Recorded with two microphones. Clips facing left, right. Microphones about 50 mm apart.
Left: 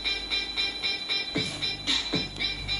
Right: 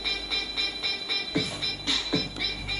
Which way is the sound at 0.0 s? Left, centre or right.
Centre.